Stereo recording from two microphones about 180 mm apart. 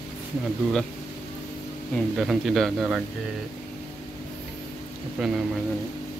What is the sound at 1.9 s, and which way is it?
Speech, centre (ahead or behind).